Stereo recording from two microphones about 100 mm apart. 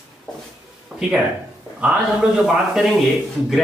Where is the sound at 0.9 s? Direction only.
Centre (ahead or behind).